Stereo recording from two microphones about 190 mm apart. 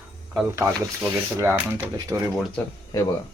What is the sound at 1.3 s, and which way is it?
Speech, 15° right (ahead or behind).